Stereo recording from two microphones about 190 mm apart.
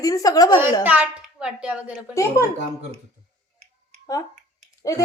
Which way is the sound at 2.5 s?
35° right (ahead or behind).